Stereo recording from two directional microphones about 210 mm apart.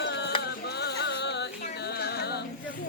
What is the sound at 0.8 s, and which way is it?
Music, 50° left (ahead or behind).